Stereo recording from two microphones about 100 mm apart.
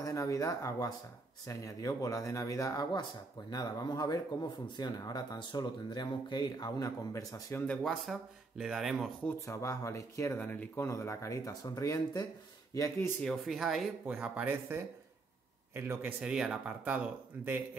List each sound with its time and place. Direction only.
0.0 s speech: 35° left (ahead or behind)
7.6 s speech: 5° left (ahead or behind)
9.5 s speech: 30° left (ahead or behind)
13.2 s speech: centre (ahead or behind)
14.0 s a man's voice: 15° right (ahead or behind)
16.3 s speech: 5° right (ahead or behind)